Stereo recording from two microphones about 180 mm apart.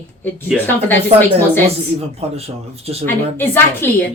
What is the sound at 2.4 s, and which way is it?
Speech, 35° right (ahead or behind).